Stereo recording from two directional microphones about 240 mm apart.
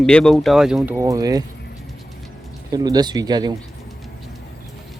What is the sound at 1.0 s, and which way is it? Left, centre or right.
Speech, centre.